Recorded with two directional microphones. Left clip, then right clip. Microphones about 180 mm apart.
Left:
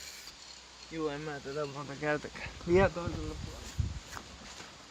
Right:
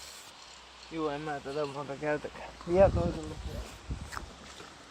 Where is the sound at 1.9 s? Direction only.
75° left (ahead or behind).